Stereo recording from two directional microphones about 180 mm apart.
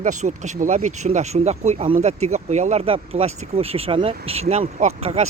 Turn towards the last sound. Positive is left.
turn(degrees=-35)  # may be behind; listen again after turning